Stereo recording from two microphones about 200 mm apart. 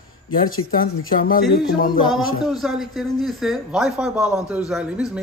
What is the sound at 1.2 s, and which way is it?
Speech, 45° left (ahead or behind).